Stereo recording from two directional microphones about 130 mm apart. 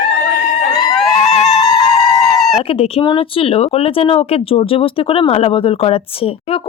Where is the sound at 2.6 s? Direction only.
45° left (ahead or behind).